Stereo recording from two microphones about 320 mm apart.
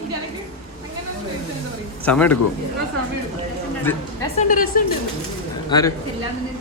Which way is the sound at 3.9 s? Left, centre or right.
Centre.